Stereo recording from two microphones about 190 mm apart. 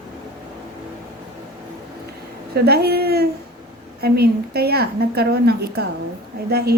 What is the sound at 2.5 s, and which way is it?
A woman's voice, 55° right (ahead or behind).